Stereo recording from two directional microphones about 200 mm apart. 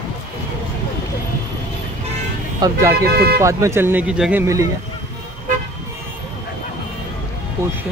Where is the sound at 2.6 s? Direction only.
15° right (ahead or behind).